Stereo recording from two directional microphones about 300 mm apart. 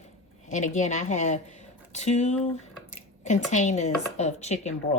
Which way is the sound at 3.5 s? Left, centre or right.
Left.